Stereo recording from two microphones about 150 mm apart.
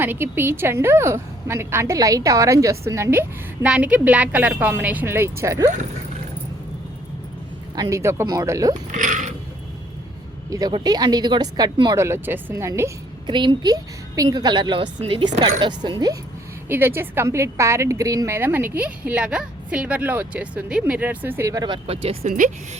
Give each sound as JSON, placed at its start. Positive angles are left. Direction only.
{"t": 0.0, "sound": "a woman's voice", "side_deg": -15}
{"t": 7.8, "sound": "a woman's voice", "side_deg": -20}
{"t": 8.7, "sound": "speech", "side_deg": -55}
{"t": 10.5, "sound": "a woman's voice", "side_deg": -25}
{"t": 12.0, "sound": "a woman's voice", "side_deg": -15}
{"t": 13.2, "sound": "a woman's voice", "side_deg": -30}
{"t": 16.6, "sound": "a woman's voice", "side_deg": -15}
{"t": 22.3, "sound": "speech", "side_deg": -60}